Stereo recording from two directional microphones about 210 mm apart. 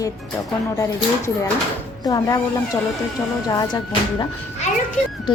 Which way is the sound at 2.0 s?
15° left (ahead or behind).